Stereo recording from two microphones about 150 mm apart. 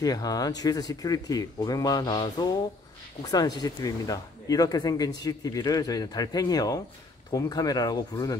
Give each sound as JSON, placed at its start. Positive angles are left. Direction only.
{"t": 0.0, "sound": "speech", "side_deg": 25}